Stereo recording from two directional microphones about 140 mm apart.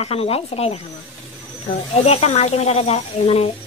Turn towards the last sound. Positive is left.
turn(degrees=45)  # may be behind; listen again after turning